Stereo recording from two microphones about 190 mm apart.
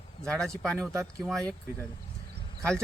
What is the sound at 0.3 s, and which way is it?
Speech, 5° left (ahead or behind).